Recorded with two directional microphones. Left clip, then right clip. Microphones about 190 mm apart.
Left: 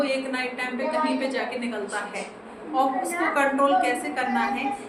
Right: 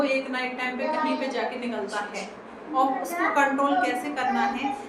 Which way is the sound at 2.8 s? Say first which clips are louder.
Even; 15° left (ahead or behind).